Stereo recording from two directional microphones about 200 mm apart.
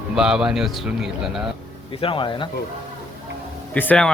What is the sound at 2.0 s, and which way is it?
Speech, 25° left (ahead or behind).